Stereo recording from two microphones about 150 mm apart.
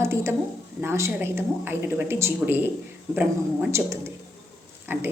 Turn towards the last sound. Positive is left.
turn(degrees=-15)  # may be behind; listen again after turning